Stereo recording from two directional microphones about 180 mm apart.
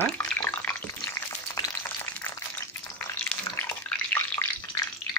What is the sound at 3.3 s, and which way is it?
Bathtub, 10° left (ahead or behind).